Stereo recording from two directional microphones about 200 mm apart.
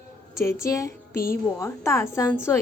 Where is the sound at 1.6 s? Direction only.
15° left (ahead or behind).